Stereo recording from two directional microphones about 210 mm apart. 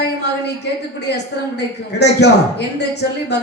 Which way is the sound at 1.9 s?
55° left (ahead or behind).